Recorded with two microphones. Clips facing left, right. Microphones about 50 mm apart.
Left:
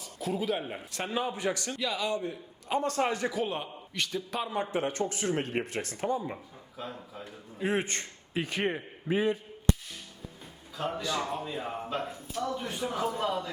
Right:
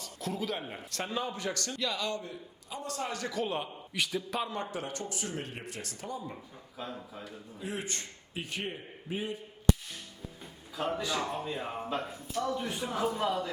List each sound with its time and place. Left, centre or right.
0.0 s a man's voice: centre
2.6 s a man's voice: left
3.1 s a man's voice: left
3.3 s speech: centre
4.5 s a man's voice: centre
4.8 s speech: left
7.6 s speech: left
8.3 s speech: left
9.1 s speech: left
10.8 s speech: centre